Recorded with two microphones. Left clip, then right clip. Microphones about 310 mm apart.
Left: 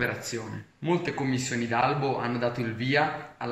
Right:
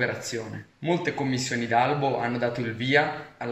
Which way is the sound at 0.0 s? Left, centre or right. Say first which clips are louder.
Right 2 dB; centre.